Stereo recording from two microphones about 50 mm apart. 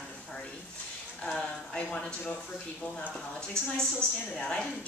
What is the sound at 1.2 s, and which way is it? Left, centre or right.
Speech, centre.